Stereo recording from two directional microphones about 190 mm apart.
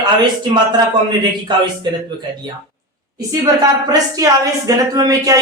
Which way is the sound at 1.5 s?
25° right (ahead or behind).